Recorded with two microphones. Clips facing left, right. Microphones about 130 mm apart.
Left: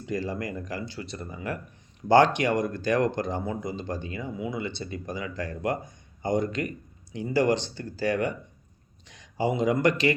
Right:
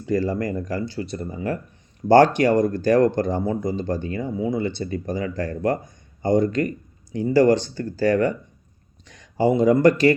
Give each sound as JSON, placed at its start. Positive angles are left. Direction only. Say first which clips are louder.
{"t": 0.0, "sound": "speech", "louder": "right 8 dB", "side_deg": -40}